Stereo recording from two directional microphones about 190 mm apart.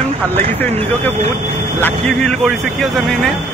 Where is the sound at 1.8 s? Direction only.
5° left (ahead or behind).